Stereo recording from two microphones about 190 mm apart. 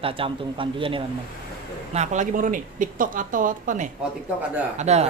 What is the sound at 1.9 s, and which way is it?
Speech, 35° right (ahead or behind).